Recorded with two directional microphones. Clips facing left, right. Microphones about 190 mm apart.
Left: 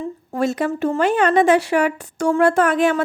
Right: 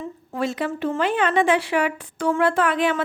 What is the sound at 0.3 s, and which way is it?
Speech, 45° left (ahead or behind).